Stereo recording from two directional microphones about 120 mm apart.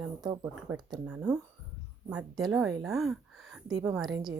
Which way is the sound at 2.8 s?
Centre (ahead or behind).